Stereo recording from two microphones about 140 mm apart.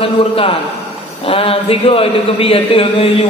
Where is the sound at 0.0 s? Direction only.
40° left (ahead or behind).